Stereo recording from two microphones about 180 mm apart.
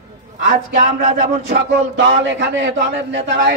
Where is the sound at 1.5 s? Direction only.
75° right (ahead or behind).